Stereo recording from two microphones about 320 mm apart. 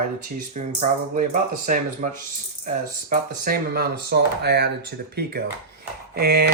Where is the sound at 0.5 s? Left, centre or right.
Right.